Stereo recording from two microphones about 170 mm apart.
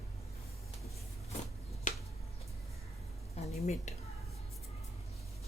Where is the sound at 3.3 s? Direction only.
40° left (ahead or behind).